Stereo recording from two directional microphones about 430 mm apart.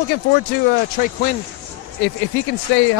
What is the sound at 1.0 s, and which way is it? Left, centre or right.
Speech, centre.